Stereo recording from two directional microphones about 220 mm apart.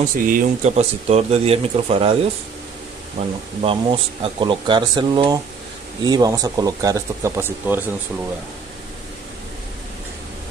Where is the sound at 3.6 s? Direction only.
25° right (ahead or behind).